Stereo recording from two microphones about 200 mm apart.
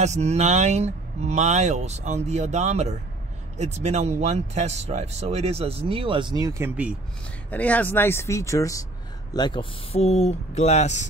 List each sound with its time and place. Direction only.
0.0 s speech: 35° right (ahead or behind); by 7.0 s 10° right (ahead or behind)
7.5 s speech: 5° left (ahead or behind); by 11.1 s 35° left (ahead or behind)